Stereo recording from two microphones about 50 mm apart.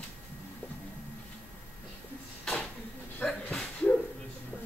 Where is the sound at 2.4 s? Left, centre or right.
Centre.